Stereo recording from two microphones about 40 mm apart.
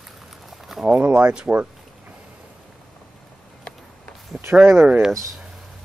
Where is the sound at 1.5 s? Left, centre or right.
Right.